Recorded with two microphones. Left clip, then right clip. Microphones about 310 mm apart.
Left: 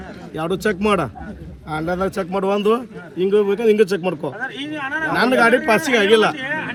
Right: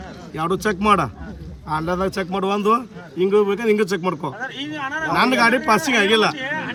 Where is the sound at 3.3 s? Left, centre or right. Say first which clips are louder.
Left 2 dB; centre.